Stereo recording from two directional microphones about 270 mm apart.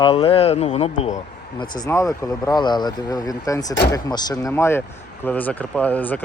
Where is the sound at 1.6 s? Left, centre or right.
Centre.